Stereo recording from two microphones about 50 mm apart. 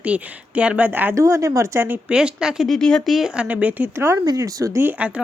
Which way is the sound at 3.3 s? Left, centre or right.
Right.